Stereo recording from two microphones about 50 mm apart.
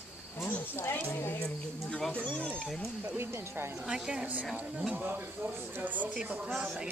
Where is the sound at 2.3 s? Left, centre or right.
Left.